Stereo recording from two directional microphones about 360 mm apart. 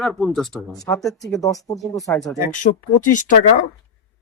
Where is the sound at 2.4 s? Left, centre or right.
Left.